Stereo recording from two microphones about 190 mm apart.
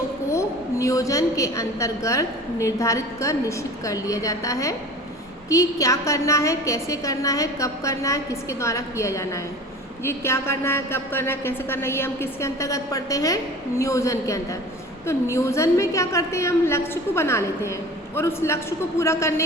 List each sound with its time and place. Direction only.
0.3 s a woman's voice: 15° left (ahead or behind)